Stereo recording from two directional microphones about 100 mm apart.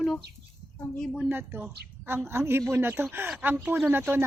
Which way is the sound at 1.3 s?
20° right (ahead or behind).